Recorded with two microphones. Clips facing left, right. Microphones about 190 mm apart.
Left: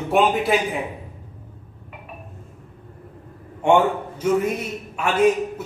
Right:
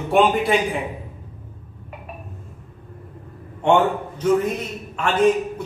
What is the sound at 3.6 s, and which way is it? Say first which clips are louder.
A man's voice: even; 10° left (ahead or behind).